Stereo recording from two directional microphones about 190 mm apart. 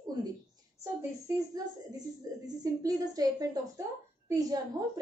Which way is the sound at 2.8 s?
20° right (ahead or behind).